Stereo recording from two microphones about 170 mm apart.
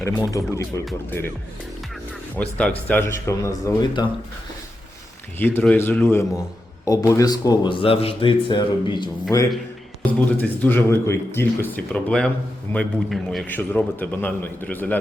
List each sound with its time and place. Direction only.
0.0 s speech: 20° left (ahead or behind)
2.4 s a man's voice: 5° left (ahead or behind); by 4.1 s 25° left (ahead or behind)
5.4 s a man's voice: 10° left (ahead or behind)
10.1 s a man's voice: 10° left (ahead or behind)